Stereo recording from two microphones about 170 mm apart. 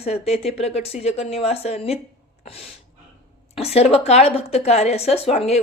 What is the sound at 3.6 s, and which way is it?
A man's voice, 35° left (ahead or behind).